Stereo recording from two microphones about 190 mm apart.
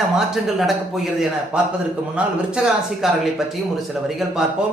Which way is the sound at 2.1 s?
5° right (ahead or behind).